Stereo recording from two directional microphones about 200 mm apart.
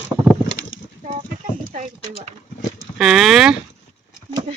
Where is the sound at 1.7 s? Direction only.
35° right (ahead or behind).